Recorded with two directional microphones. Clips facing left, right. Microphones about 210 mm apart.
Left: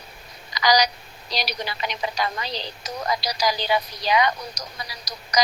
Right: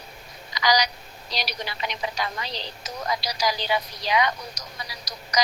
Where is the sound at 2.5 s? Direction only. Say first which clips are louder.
Left 3 dB; 35° left (ahead or behind).